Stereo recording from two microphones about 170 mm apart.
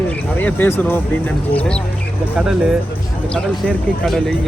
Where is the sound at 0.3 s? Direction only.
10° left (ahead or behind).